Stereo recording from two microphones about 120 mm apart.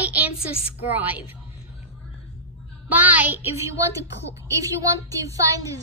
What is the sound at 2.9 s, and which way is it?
A woman's voice, 15° right (ahead or behind).